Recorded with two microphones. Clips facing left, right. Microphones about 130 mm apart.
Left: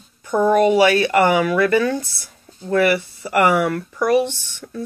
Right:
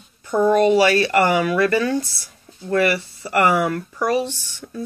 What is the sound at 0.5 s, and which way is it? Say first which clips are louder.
Speech: left 1 dB; 15° left (ahead or behind).